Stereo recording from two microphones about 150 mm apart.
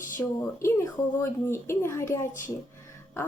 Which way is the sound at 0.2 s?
15° left (ahead or behind).